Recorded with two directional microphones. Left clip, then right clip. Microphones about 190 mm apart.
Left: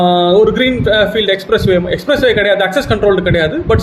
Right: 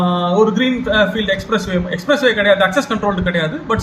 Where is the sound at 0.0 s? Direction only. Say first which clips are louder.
Left 6 dB; 15° left (ahead or behind).